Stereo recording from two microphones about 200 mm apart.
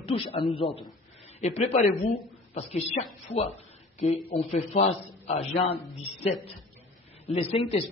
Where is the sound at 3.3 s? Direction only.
30° left (ahead or behind).